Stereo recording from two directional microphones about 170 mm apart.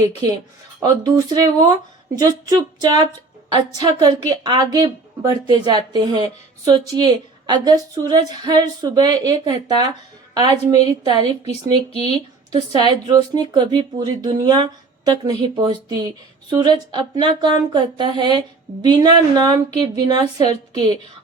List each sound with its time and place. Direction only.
0.8 s speech: 20° right (ahead or behind)
20.2 s a woman's voice: 40° left (ahead or behind)